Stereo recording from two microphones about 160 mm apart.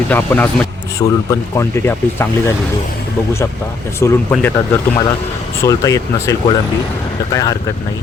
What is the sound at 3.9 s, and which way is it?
A man's voice, 15° left (ahead or behind).